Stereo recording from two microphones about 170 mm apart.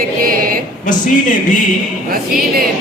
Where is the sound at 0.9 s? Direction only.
50° left (ahead or behind).